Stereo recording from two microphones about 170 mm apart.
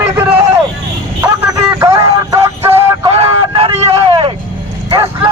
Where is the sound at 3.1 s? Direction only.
35° right (ahead or behind).